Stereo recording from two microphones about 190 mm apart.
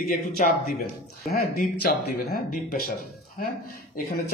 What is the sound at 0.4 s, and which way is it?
Speech, 45° left (ahead or behind).